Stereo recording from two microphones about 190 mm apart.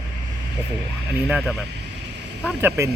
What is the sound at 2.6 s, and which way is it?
Speech, 15° right (ahead or behind).